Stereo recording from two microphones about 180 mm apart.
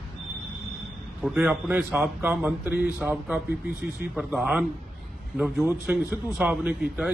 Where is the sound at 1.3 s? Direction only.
10° right (ahead or behind).